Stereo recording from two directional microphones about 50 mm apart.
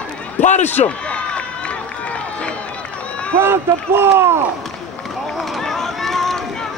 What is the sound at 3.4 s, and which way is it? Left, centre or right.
Speech, right.